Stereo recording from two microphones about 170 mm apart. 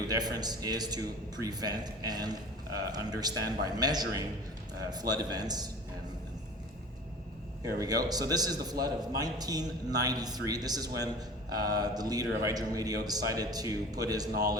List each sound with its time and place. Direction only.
0.1 s a man's voice: 25° right (ahead or behind)
7.8 s a man's voice: 20° right (ahead or behind)